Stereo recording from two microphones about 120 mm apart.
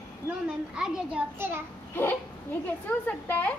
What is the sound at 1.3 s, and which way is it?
Speech, 20° right (ahead or behind).